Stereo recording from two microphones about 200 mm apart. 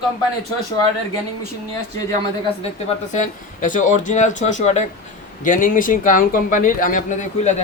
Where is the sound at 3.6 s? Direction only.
40° left (ahead or behind).